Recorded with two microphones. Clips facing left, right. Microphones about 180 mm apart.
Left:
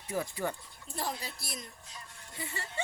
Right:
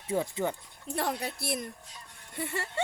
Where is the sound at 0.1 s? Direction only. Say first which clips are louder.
Right 4 dB; 25° right (ahead or behind).